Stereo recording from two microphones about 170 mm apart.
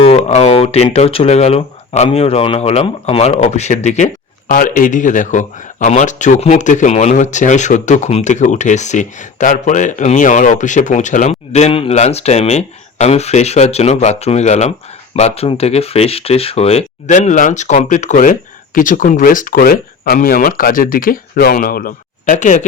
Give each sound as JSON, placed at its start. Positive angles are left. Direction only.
{"t": 0.0, "sound": "speech", "side_deg": 40}
{"t": 4.4, "sound": "speech", "side_deg": 55}